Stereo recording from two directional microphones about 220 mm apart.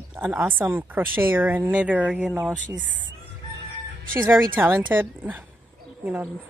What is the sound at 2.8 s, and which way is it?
Speech, 60° right (ahead or behind).